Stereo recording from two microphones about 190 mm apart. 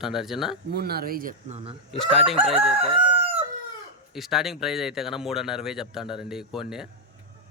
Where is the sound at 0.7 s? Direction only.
55° right (ahead or behind); by 1.7 s 35° right (ahead or behind).